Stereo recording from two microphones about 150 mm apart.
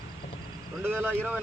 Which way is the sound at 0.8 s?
15° right (ahead or behind).